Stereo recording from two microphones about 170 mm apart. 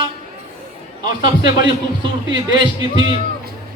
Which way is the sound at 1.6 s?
30° right (ahead or behind).